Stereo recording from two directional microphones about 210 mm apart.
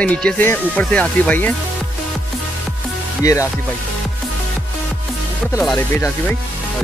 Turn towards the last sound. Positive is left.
turn(degrees=10)  # may be behind; listen again after turning